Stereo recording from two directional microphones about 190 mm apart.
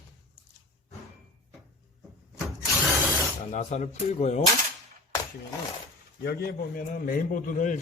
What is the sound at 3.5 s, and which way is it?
Speech, 35° left (ahead or behind).